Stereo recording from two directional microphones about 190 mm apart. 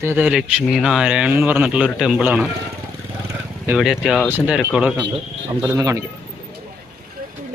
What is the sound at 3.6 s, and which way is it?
Speech, 5° right (ahead or behind).